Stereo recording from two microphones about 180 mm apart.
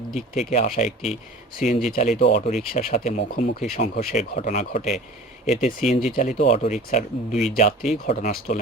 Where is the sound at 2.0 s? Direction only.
45° left (ahead or behind).